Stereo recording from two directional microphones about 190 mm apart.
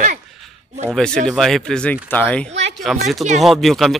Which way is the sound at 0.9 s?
5° left (ahead or behind).